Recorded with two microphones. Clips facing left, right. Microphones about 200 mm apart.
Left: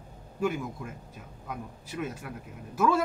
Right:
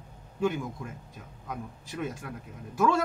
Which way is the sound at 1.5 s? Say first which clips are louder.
Even; 5° left (ahead or behind).